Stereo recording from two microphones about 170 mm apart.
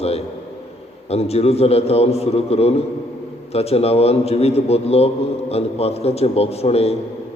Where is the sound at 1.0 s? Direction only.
35° left (ahead or behind).